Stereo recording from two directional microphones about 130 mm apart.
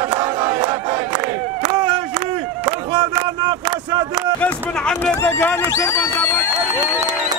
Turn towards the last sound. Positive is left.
turn(degrees=20)  # may be behind; listen again after turning